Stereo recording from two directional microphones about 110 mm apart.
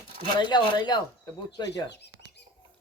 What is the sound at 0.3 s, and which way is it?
Speech, 45° left (ahead or behind).